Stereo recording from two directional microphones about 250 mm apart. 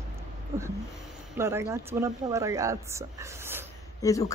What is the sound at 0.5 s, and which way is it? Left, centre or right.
Speech, centre.